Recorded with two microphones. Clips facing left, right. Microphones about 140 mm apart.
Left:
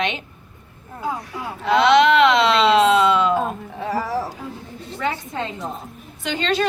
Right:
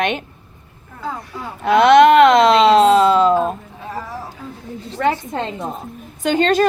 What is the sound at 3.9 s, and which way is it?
Speech, 80° left.